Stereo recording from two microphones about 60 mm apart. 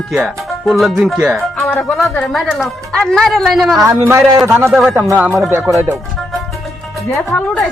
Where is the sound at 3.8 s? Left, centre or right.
Right.